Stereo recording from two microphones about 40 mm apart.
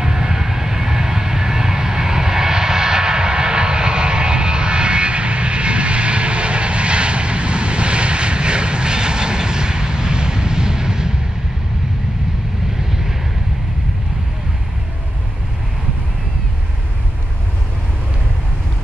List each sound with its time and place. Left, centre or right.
0.0 s vehicle: centre